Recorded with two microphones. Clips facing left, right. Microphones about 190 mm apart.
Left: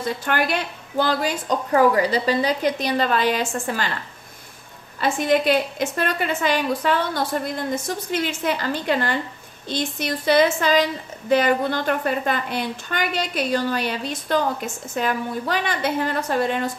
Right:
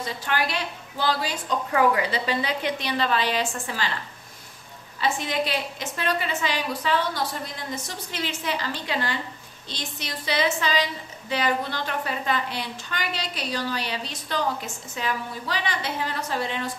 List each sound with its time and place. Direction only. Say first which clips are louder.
0.0 s a woman's voice: left 4 dB; 55° left (ahead or behind)
1.7 s a woman's voice: left 5 dB; 40° left (ahead or behind)
5.0 s a woman's voice: left 7 dB; 50° left (ahead or behind)